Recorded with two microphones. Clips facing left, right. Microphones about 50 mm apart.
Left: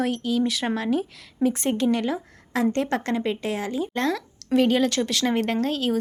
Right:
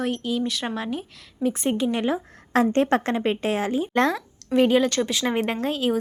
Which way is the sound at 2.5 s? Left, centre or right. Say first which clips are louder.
Right 4 dB; right.